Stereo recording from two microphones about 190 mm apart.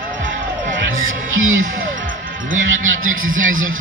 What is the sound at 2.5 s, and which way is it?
A man's voice, 90° right.